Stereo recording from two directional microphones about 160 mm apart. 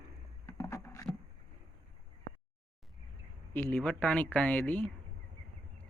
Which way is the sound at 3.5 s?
10° left (ahead or behind).